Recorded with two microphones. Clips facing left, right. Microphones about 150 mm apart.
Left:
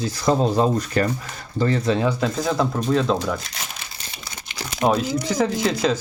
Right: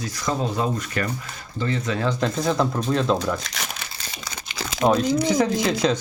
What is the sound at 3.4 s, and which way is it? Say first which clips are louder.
Crumpling: right 2 dB; 85° right.